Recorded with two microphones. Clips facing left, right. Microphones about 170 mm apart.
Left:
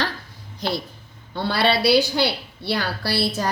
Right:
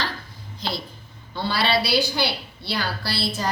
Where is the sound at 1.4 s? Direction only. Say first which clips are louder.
Left 2 dB; 60° left (ahead or behind).